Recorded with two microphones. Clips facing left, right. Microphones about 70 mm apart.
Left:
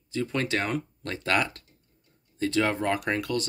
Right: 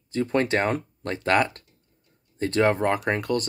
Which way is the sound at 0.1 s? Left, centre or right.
Right.